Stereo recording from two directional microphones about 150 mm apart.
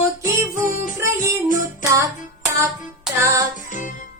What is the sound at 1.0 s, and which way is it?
Music, 20° right (ahead or behind).